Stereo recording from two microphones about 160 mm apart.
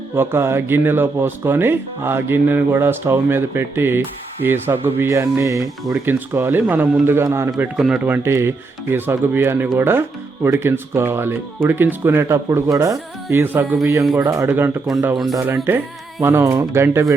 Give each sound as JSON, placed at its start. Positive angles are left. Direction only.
{"t": 0.2, "sound": "speech", "side_deg": -15}
{"t": 7.6, "sound": "speech", "side_deg": -5}
{"t": 15.0, "sound": "speech", "side_deg": 0}
{"t": 15.7, "sound": "speech", "side_deg": -15}